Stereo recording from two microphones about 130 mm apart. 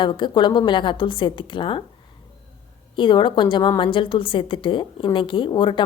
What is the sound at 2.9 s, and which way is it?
A woman's voice, 40° left (ahead or behind).